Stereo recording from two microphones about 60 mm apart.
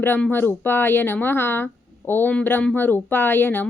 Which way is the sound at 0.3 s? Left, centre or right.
Left.